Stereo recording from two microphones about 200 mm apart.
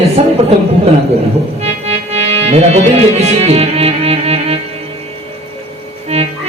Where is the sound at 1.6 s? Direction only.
30° right (ahead or behind).